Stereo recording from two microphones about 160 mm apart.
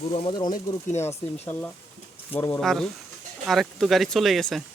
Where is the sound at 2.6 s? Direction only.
Centre (ahead or behind).